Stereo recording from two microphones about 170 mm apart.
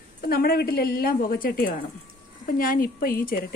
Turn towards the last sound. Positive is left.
turn(degrees=60)  # may be behind; listen again after turning